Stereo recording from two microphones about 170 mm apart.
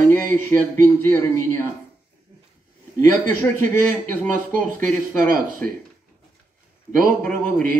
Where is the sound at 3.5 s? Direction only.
10° left (ahead or behind).